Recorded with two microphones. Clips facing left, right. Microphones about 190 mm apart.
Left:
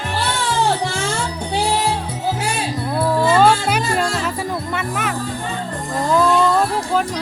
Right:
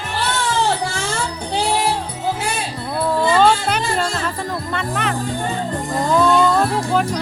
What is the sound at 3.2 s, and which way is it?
Music, 5° left (ahead or behind).